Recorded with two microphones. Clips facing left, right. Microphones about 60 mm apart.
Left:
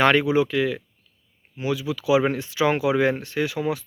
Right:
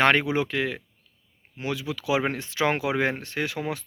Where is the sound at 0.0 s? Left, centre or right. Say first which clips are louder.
Left 3 dB; right.